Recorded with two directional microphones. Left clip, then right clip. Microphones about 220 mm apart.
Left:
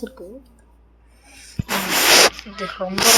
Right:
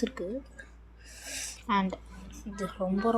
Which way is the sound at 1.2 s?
30° right (ahead or behind).